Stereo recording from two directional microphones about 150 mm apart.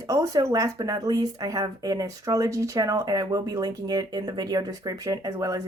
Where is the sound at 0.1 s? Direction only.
20° right (ahead or behind).